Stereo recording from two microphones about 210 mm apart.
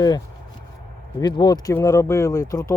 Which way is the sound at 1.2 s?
20° left (ahead or behind).